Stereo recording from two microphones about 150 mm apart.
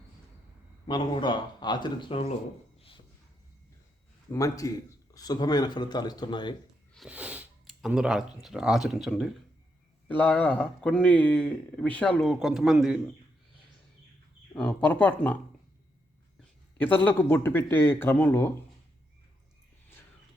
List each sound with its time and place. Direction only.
0.9 s speech: 30° left (ahead or behind)
4.3 s speech: 20° left (ahead or behind)
7.1 s speech: 10° right (ahead or behind)
10.1 s speech: 10° left (ahead or behind)
14.5 s speech: 5° left (ahead or behind)
16.4 s speech: 10° left (ahead or behind)